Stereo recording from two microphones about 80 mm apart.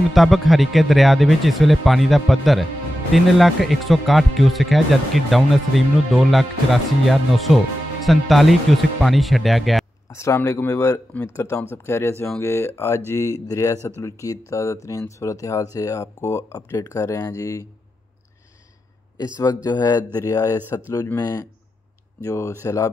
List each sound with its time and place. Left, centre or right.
0.1 s speech: centre
10.0 s speech: left
13.1 s speech: left
16.5 s speech: left
19.4 s speech: left
21.2 s speech: left
22.2 s speech: left